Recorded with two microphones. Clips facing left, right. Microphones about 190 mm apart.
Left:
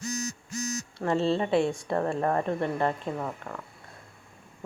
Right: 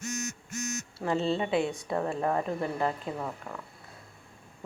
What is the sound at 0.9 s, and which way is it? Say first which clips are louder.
A woman's voice: left 3 dB; centre (ahead or behind).